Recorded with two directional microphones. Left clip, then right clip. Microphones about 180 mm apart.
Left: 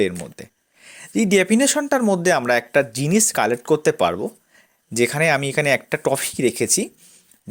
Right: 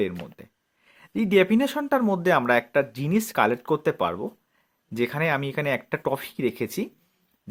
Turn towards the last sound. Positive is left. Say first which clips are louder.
# left 7 dB
turn(degrees=30)  # may be behind; listen again after turning